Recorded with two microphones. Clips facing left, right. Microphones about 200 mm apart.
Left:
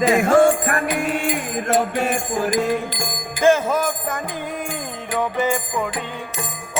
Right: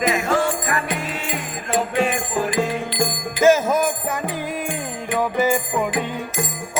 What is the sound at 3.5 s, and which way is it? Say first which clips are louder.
Music: right 1 dB; 10° right (ahead or behind).